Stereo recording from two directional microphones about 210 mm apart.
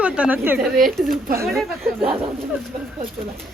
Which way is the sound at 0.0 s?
5° right (ahead or behind).